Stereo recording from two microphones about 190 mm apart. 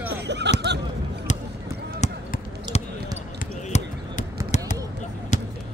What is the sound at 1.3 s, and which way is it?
Basketball bounce, 40° left (ahead or behind).